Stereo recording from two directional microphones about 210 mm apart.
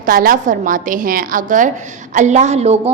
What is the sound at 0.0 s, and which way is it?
A woman's voice, 40° right (ahead or behind).